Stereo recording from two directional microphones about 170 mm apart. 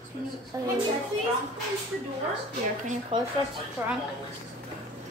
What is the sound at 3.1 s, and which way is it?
Speech, 30° right (ahead or behind).